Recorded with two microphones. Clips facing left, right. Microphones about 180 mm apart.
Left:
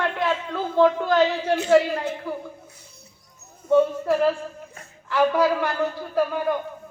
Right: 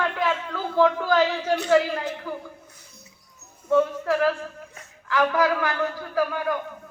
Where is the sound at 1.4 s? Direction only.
5° left (ahead or behind).